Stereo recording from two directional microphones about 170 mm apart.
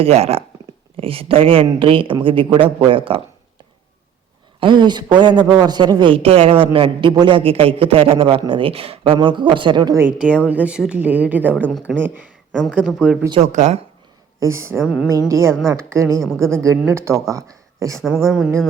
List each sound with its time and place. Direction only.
0.0 s speech: 35° right (ahead or behind)
4.6 s a man's voice: 25° right (ahead or behind); by 11.4 s 10° right (ahead or behind)
11.6 s speech: 5° left (ahead or behind)
11.9 s speech: 10° right (ahead or behind)
12.5 s speech: 5° left (ahead or behind)
13.4 s speech: 45° right (ahead or behind)
14.3 s speech: 15° right (ahead or behind)
18.0 s speech: centre (ahead or behind)